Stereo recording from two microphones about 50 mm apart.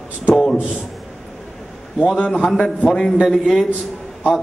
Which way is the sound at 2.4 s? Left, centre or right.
Centre.